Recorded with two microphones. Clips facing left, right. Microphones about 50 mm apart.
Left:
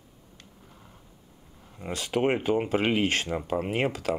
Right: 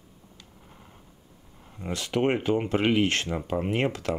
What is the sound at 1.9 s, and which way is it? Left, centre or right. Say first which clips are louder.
Speech: even; centre.